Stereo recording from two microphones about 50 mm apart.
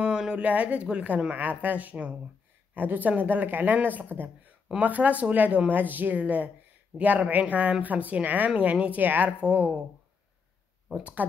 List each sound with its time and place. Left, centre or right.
0.0 s a sound: centre
0.4 s a woman's voice: right
9.4 s a woman's voice: right
10.9 s speech: centre